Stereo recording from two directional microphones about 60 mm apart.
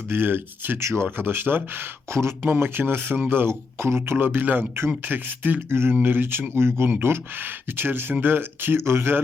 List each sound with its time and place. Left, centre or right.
0.1 s speech: right
0.8 s speech: right
1.1 s speech: right